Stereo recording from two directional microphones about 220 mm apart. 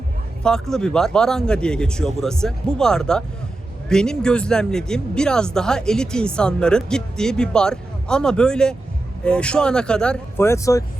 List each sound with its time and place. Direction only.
0.4 s speech: 5° left (ahead or behind)